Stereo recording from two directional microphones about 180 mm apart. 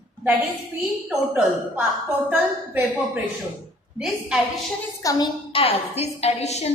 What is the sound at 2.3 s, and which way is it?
A woman's voice, 10° right (ahead or behind).